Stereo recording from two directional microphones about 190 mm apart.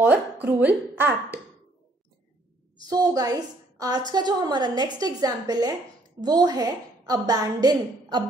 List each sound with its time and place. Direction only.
0.0 s speech: 10° right (ahead or behind)
2.8 s a woman's voice: 20° right (ahead or behind)